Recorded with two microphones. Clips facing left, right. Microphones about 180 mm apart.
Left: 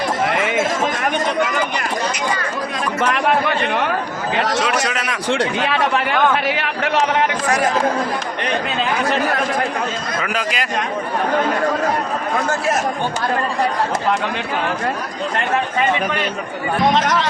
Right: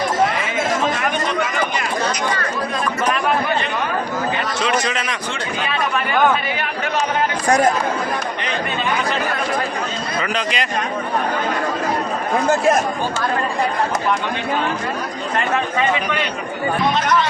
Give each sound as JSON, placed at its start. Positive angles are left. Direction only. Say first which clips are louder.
{"t": 4.4, "sound": "a sound", "louder": "left 5 dB", "side_deg": 85}
{"t": 4.9, "sound": "a man's voice", "louder": "even", "side_deg": 0}
{"t": 5.3, "sound": "a man's voice", "louder": "left 9 dB", "side_deg": 85}
{"t": 10.2, "sound": "a man's voice", "louder": "right 2 dB", "side_deg": 5}
{"t": 16.9, "sound": "speech", "louder": "left 1 dB", "side_deg": 90}